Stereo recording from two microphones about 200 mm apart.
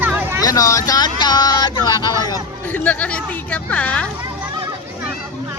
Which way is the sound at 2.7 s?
5° left (ahead or behind).